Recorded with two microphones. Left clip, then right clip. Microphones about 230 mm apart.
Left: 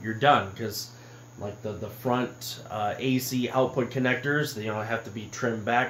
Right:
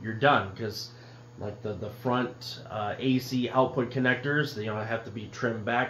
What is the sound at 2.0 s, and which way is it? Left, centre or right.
Speech, left.